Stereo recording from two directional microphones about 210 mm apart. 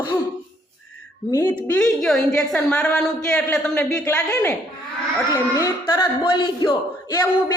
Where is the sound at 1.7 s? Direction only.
Centre (ahead or behind).